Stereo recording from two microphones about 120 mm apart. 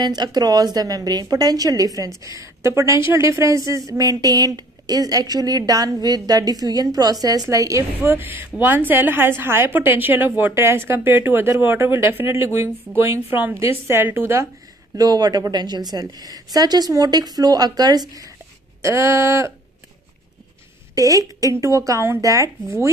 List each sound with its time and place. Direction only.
0.0 s a woman's voice: 35° right (ahead or behind)
15.0 s a woman's voice: 35° right (ahead or behind)
20.9 s a woman's voice: 30° right (ahead or behind)